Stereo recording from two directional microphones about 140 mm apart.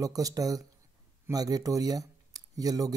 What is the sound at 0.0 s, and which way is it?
Speech, 25° right (ahead or behind).